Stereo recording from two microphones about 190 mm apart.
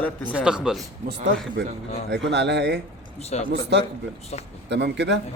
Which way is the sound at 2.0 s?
65° right (ahead or behind).